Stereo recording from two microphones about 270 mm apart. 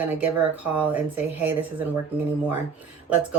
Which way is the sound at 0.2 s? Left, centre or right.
Centre.